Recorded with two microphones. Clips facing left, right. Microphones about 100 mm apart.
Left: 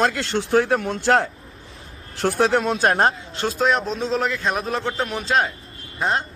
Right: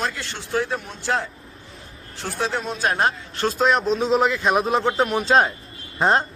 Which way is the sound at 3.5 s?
Centre (ahead or behind).